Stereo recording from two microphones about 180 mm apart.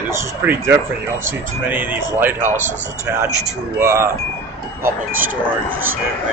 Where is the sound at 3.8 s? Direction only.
15° right (ahead or behind).